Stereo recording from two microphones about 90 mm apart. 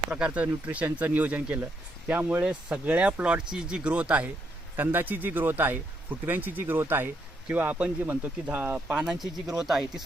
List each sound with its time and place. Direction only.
0.1 s speech: 15° right (ahead or behind)